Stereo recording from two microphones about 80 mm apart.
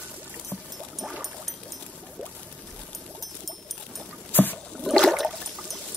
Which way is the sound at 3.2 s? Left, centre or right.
Centre.